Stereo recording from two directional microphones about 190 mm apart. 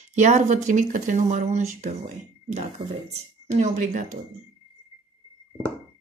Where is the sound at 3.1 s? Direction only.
40° right (ahead or behind).